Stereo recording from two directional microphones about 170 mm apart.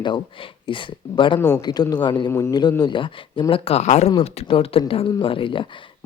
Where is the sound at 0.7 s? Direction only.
30° left (ahead or behind).